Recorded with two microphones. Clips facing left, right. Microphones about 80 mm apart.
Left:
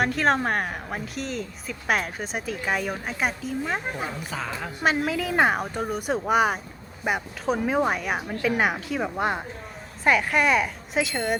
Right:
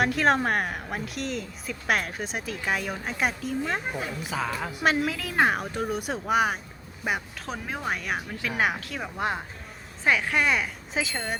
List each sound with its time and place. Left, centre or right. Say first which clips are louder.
0.0 s a woman's voice: even; centre